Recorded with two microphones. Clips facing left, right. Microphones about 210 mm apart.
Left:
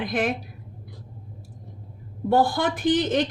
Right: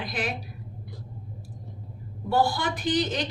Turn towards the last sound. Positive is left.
turn(degrees=50)  # may be behind; listen again after turning